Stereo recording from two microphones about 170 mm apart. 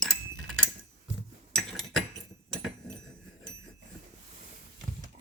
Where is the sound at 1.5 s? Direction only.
Centre (ahead or behind).